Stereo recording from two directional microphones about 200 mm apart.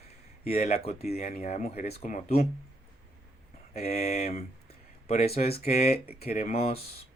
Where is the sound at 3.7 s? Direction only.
30° left (ahead or behind).